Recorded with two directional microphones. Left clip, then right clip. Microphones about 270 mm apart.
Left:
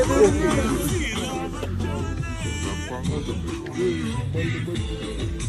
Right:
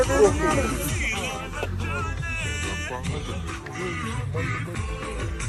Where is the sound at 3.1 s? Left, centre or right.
Right.